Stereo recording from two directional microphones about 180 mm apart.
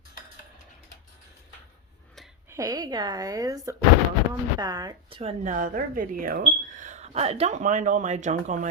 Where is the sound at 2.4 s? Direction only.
15° right (ahead or behind).